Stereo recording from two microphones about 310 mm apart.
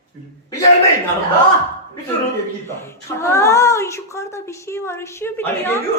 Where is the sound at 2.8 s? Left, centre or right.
Centre.